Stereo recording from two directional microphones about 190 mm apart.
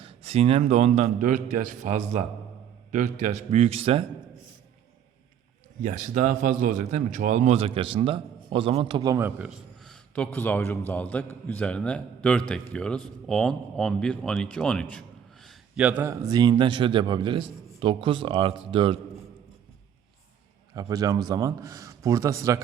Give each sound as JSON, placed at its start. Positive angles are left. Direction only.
{"t": 0.0, "sound": "a man's voice", "side_deg": -30}
{"t": 5.8, "sound": "a man's voice", "side_deg": -40}
{"t": 20.7, "sound": "a man's voice", "side_deg": -20}